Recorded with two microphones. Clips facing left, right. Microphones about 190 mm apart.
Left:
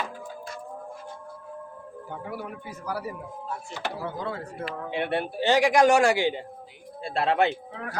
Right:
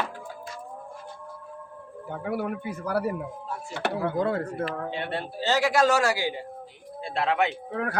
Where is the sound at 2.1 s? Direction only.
60° right (ahead or behind).